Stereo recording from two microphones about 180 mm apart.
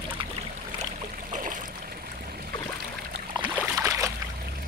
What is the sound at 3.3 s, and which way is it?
Boat, 20° right (ahead or behind).